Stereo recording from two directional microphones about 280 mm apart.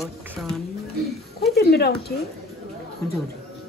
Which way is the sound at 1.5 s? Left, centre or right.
Left.